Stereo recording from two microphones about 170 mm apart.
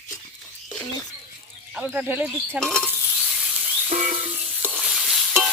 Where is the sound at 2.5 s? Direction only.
5° left (ahead or behind).